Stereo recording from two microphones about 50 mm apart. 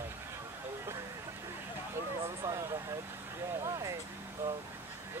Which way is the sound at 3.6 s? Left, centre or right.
Right.